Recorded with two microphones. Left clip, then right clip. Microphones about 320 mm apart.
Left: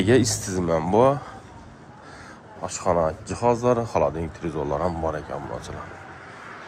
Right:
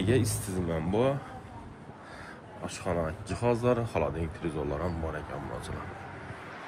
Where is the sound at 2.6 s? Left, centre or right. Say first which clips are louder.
Left 10 dB; centre.